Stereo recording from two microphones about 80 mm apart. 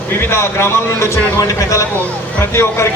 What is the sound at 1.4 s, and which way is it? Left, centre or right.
A man's voice, left.